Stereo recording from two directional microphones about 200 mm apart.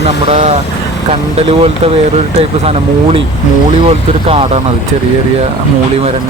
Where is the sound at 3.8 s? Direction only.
30° right (ahead or behind).